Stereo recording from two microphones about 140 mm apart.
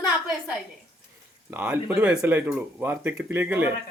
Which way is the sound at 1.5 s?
10° right (ahead or behind).